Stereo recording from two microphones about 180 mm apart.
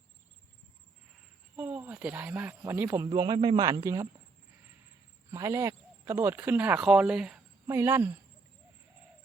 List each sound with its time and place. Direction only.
1.5 s speech: 15° right (ahead or behind)
3.1 s a man's voice: 25° right (ahead or behind)
5.3 s speech: 15° right (ahead or behind)